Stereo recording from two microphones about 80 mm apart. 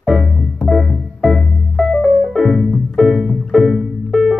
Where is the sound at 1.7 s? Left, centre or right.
Centre.